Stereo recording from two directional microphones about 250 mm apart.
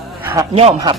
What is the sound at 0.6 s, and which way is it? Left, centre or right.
Speech, right.